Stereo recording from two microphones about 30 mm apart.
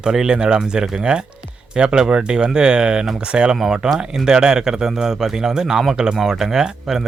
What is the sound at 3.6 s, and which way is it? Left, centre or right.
Speech, centre.